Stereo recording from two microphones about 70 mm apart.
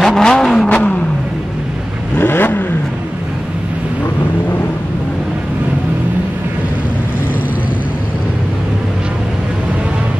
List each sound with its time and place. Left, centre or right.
0.0 s vehicle: centre
2.1 s vehicle: left